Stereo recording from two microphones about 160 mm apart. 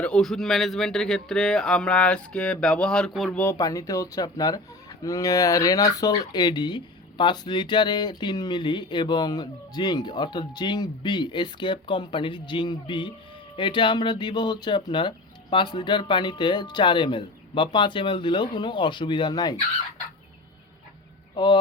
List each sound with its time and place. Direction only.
0.0 s speech: 5° left (ahead or behind)
3.4 s speech: 20° left (ahead or behind)
21.3 s speech: 30° left (ahead or behind)